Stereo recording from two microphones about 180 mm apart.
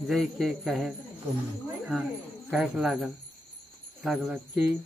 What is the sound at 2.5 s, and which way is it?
Speech, 5° right (ahead or behind).